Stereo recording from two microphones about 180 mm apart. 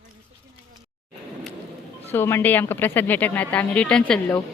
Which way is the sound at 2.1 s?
10° left (ahead or behind).